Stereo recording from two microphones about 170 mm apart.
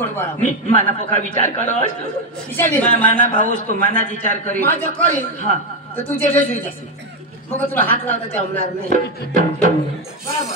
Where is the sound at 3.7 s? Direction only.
50° right (ahead or behind).